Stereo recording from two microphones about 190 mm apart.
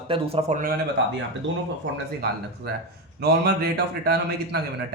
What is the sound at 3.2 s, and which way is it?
A man's voice, 60° right (ahead or behind).